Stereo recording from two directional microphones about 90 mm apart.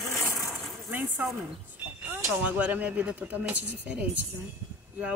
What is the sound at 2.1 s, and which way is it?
A woman's voice, 15° right (ahead or behind).